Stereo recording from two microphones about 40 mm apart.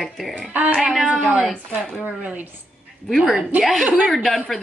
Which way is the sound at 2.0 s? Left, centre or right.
Right.